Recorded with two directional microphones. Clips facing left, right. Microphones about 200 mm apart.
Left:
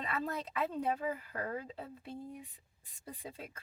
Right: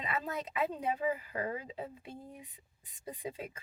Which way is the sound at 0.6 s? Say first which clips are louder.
Right 1 dB; 15° right (ahead or behind).